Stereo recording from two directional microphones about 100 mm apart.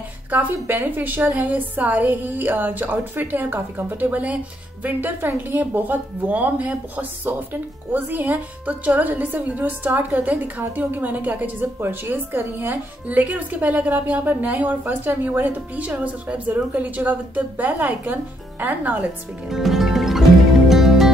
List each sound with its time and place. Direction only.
0.3 s a woman's voice: 15° right (ahead or behind)
19.5 s music: 5° right (ahead or behind)